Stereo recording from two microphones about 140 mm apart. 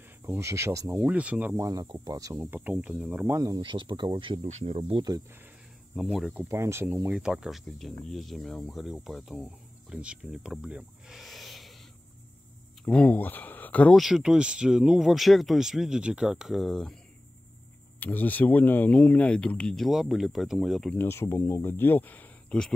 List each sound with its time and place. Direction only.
0.2 s speech: 20° right (ahead or behind)
1.6 s speech: 25° right (ahead or behind)
2.4 s speech: 10° right (ahead or behind)
3.3 s speech: 30° right (ahead or behind); by 5.0 s 45° right (ahead or behind)
5.9 s speech: centre (ahead or behind)
6.5 s speech: 20° right (ahead or behind)
7.1 s speech: 5° right (ahead or behind)
12.8 s speech: 10° left (ahead or behind)
13.9 s speech: 5° right (ahead or behind)
18.0 s speech: 10° left (ahead or behind)
20.9 s speech: 15° left (ahead or behind)